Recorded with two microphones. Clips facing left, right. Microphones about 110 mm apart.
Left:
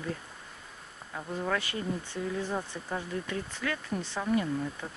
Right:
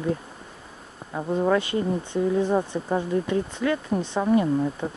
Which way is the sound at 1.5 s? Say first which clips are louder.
Right 8 dB; 25° right (ahead or behind).